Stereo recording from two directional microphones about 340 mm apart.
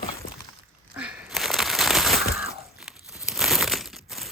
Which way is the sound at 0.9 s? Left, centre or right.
Centre.